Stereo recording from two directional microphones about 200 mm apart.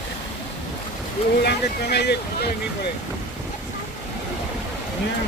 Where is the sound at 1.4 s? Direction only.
55° left (ahead or behind).